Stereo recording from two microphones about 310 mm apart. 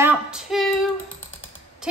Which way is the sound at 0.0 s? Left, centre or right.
Centre.